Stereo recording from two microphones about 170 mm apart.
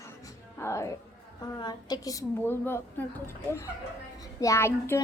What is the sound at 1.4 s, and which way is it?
A woman's voice, 25° left (ahead or behind).